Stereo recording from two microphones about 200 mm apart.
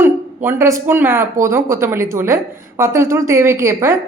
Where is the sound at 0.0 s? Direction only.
10° right (ahead or behind).